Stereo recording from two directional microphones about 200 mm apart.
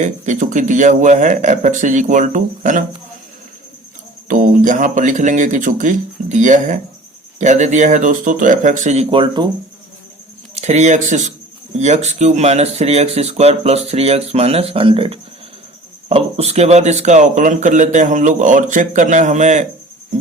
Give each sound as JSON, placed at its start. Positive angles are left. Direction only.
{"t": 0.0, "sound": "speech", "side_deg": -40}
{"t": 4.3, "sound": "speech", "side_deg": -40}
{"t": 10.5, "sound": "speech", "side_deg": -35}